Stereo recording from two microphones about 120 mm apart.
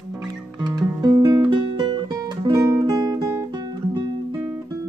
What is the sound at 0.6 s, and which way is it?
Music, 35° right (ahead or behind).